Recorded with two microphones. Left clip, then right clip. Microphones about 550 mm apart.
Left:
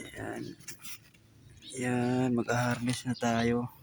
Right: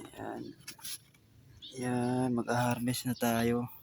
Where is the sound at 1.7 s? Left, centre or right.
Right.